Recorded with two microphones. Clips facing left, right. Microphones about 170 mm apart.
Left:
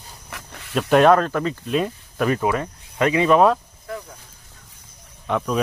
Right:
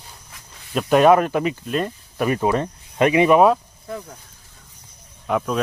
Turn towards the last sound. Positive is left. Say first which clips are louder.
# even
turn(degrees=-5)  # may be behind; listen again after turning